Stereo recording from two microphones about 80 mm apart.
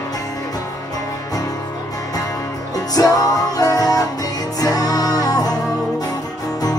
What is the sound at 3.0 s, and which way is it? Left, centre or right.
Music, left.